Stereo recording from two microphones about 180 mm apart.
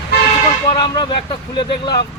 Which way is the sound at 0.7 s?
30° left (ahead or behind).